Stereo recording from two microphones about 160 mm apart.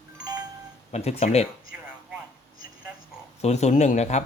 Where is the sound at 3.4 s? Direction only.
45° left (ahead or behind).